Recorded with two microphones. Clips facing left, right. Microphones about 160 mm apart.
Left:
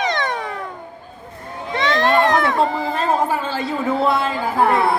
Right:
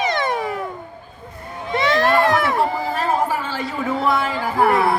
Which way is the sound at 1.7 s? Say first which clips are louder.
Right 1 dB; 10° right (ahead or behind).